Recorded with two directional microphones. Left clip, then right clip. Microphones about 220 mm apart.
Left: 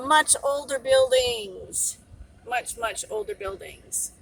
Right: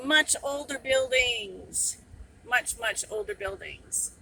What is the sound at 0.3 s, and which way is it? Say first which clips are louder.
Speech: left 6 dB; 20° right (ahead or behind).